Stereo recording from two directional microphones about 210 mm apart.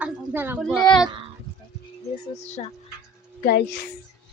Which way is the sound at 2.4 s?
30° left (ahead or behind).